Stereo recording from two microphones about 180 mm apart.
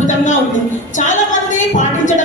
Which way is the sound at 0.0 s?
45° left (ahead or behind).